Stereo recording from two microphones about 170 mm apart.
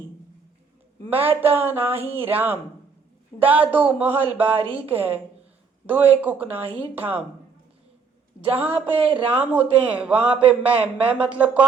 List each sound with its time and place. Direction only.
1.2 s speech: 10° right (ahead or behind)
8.7 s a sound: 35° right (ahead or behind)
9.3 s speech: 10° right (ahead or behind)